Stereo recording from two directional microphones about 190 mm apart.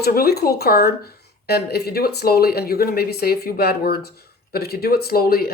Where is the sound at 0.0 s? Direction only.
55° left (ahead or behind).